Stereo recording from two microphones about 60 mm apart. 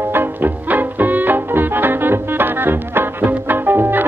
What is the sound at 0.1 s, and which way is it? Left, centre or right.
Music, right.